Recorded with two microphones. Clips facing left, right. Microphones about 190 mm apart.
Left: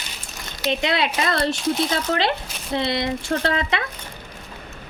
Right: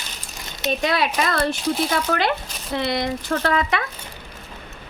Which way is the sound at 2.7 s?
25° left (ahead or behind).